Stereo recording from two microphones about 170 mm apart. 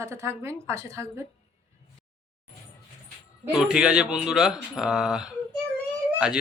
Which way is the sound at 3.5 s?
5° right (ahead or behind).